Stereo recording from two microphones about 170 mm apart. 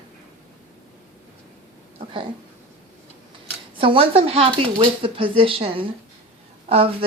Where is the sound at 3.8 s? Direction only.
30° right (ahead or behind).